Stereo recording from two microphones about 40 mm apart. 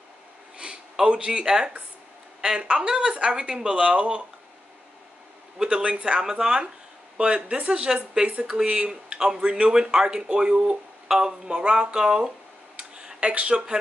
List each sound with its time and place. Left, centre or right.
1.0 s speech: right
5.6 s speech: right
12.7 s a sound: right